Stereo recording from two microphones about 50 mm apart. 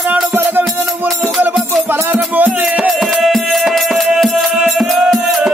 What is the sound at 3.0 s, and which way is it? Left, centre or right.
Music, centre.